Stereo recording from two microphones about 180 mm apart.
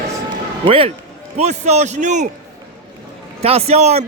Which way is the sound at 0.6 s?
30° right (ahead or behind).